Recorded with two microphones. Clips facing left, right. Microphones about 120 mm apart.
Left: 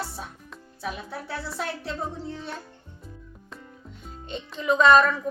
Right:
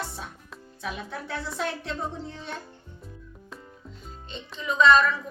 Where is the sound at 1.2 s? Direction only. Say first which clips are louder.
Right 1 dB; 5° left (ahead or behind).